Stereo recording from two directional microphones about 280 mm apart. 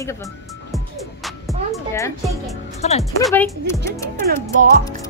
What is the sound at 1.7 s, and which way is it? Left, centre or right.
Speech, centre.